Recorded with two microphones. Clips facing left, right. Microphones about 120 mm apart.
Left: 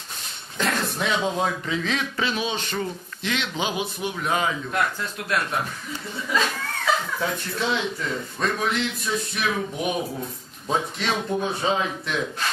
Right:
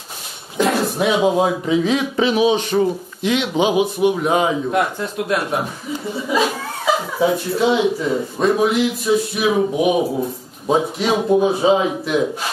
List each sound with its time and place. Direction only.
0.7 s speech: 10° right (ahead or behind)